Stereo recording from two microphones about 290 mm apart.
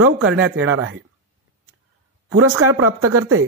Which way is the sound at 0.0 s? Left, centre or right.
Right.